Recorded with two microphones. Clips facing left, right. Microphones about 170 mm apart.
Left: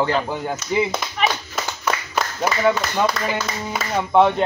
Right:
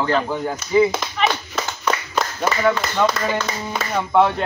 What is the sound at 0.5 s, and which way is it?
Speech, 5° left (ahead or behind).